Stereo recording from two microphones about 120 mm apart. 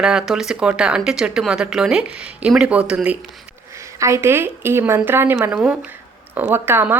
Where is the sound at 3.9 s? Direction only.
25° right (ahead or behind).